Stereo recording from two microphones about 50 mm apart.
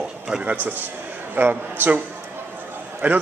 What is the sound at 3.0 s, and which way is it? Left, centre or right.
Speech, right.